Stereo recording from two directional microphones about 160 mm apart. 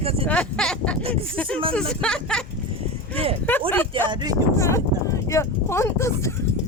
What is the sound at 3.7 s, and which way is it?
Speech, 10° left (ahead or behind).